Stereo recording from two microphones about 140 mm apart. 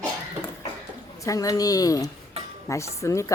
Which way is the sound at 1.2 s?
25° left (ahead or behind).